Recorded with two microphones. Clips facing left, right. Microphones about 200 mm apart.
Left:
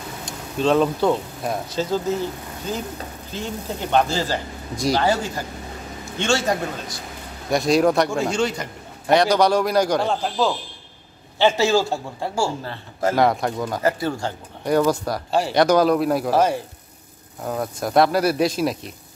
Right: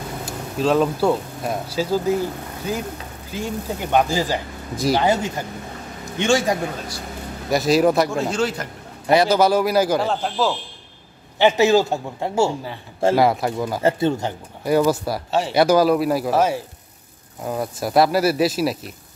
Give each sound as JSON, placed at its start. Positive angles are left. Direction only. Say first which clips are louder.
{"t": 0.2, "sound": "a man's voice", "louder": "even", "side_deg": -5}
{"t": 7.5, "sound": "a man's voice", "louder": "right 1 dB", "side_deg": -5}
{"t": 11.3, "sound": "a man's voice", "louder": "right 3 dB", "side_deg": -15}
{"t": 13.1, "sound": "a man's voice", "louder": "right 1 dB", "side_deg": -5}
{"t": 13.8, "sound": "speech", "louder": "right 4 dB", "side_deg": -25}
{"t": 14.6, "sound": "a man's voice", "louder": "right 1 dB", "side_deg": -5}